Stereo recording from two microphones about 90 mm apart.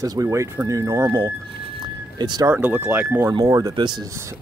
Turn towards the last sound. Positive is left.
turn(degrees=-45)  # may be behind; listen again after turning